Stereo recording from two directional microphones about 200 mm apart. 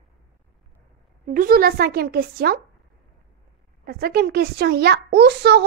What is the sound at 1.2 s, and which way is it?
A child's voice, 45° right (ahead or behind).